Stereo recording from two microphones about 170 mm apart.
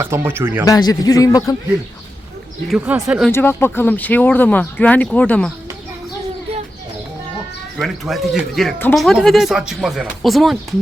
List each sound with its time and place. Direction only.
0.0 s speech: 15° right (ahead or behind)
0.6 s a man's voice: 20° left (ahead or behind)
2.6 s speech: 5° right (ahead or behind)
3.3 s speech: 15° left (ahead or behind)
7.8 s speech: centre (ahead or behind)